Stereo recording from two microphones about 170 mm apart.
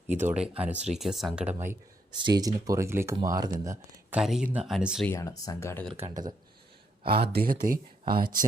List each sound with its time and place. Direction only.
0.1 s speech: 10° right (ahead or behind)
2.1 s speech: 25° right (ahead or behind)
4.2 s speech: 5° right (ahead or behind)
5.0 s speech: 20° left (ahead or behind)
6.1 s speech: 25° right (ahead or behind)
7.0 s speech: 65° right (ahead or behind)